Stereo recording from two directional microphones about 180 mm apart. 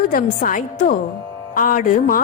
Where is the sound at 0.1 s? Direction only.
50° left (ahead or behind).